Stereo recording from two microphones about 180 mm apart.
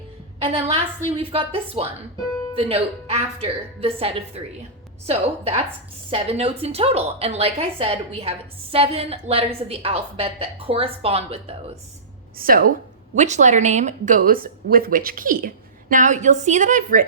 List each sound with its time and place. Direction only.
1.1 s a woman's voice: 30° right (ahead or behind)
12.4 s speech: 55° right (ahead or behind)
13.1 s speech: 40° right (ahead or behind)